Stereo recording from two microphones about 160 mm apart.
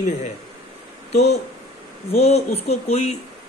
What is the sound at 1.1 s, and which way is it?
Speech, 90° left.